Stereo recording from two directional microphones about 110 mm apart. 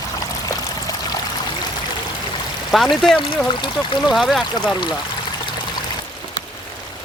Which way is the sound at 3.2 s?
50° left (ahead or behind).